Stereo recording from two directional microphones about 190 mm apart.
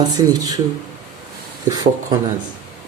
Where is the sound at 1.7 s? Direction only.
20° right (ahead or behind).